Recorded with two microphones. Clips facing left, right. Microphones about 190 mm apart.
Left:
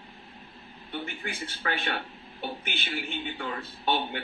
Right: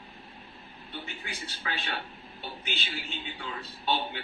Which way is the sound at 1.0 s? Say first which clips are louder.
Left 4 dB; 55° left (ahead or behind).